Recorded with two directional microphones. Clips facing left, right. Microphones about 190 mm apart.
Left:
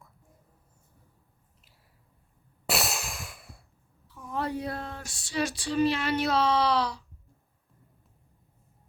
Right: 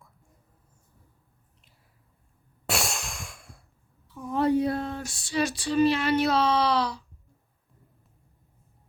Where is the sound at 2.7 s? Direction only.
Centre (ahead or behind).